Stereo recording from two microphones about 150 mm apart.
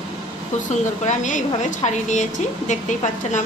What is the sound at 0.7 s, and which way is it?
A woman's voice, 50° left (ahead or behind).